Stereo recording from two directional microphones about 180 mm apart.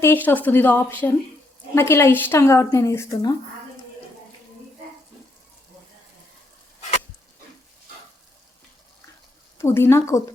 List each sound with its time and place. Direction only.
0.0 s speech: 10° left (ahead or behind)
9.6 s speech: 15° left (ahead or behind)